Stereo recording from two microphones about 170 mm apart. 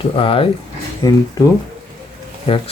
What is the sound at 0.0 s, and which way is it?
Speech, 35° left (ahead or behind).